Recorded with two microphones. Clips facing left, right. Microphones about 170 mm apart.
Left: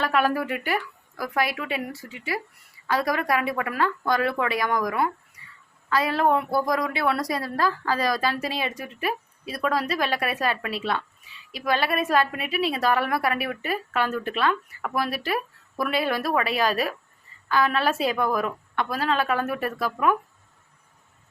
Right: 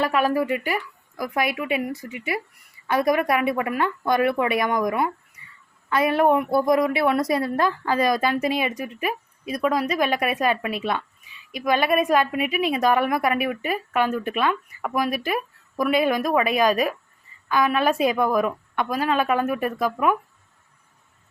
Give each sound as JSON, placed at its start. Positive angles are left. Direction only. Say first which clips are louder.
{"t": 0.1, "sound": "speech", "louder": "right 2 dB", "side_deg": 0}
{"t": 1.2, "sound": "a woman's voice", "louder": "right 2 dB", "side_deg": -20}